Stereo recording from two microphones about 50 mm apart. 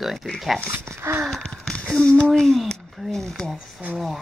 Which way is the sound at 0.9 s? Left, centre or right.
Right.